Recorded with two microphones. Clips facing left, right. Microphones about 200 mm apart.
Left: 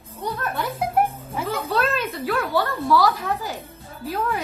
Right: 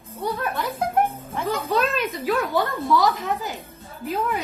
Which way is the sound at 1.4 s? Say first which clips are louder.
Right 1 dB; 5° left (ahead or behind).